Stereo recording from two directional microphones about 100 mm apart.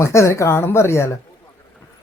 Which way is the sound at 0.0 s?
30° left (ahead or behind).